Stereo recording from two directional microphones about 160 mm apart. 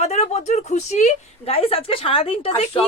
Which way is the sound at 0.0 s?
40° left (ahead or behind).